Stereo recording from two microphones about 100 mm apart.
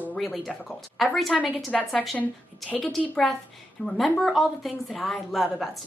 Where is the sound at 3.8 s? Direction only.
5° left (ahead or behind).